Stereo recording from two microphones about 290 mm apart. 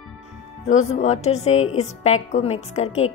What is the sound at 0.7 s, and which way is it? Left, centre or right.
Speech, left.